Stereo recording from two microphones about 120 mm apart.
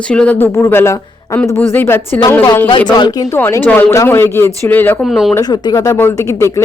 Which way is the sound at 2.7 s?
40° left (ahead or behind).